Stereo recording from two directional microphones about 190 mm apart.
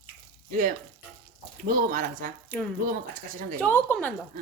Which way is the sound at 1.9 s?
45° right (ahead or behind).